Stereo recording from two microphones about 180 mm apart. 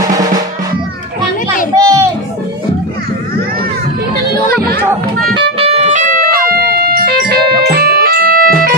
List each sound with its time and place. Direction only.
0.0 s music: 20° right (ahead or behind)
1.8 s a sound: 15° right (ahead or behind)
4.5 s chatter: 60° right (ahead or behind)
5.6 s music: 30° right (ahead or behind)
6.3 s music: 55° right (ahead or behind)